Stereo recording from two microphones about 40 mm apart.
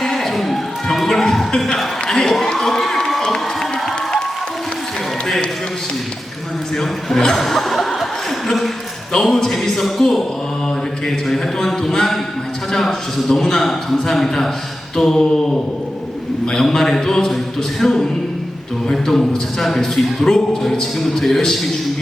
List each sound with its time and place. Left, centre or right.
0.0 s a sound: centre
3.2 s crowd: centre
6.7 s chuckle: centre
9.1 s a man's voice: centre
17.3 s a sound: centre
18.9 s a man's voice: centre